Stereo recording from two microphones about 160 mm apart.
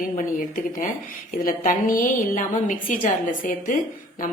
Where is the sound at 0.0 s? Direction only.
55° left (ahead or behind).